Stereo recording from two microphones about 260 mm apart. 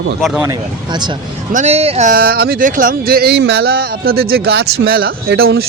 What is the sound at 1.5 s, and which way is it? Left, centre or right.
Speech, right.